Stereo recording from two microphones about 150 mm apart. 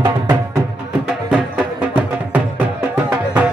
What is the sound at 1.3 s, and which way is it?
Music, 5° right (ahead or behind).